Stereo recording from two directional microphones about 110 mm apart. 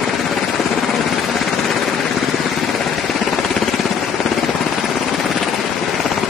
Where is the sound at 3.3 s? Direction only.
Centre (ahead or behind).